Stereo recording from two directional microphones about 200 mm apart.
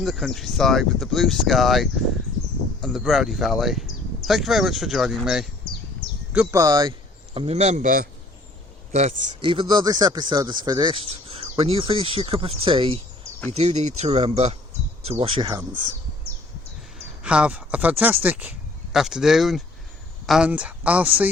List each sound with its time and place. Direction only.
0.0 s speech: centre (ahead or behind); by 6.9 s 20° right (ahead or behind)
7.3 s speech: 30° right (ahead or behind)
17.2 s speech: 5° right (ahead or behind)